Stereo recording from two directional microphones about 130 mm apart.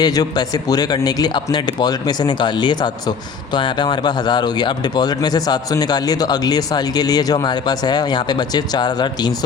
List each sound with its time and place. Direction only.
0.0 s speech: 30° left (ahead or behind)